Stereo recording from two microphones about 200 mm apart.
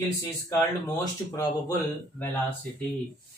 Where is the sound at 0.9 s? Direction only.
15° left (ahead or behind).